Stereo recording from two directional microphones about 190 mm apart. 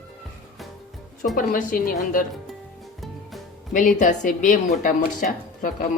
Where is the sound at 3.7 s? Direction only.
45° left (ahead or behind).